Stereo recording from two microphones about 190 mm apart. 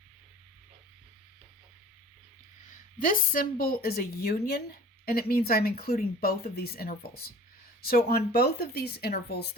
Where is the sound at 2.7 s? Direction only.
45° left (ahead or behind).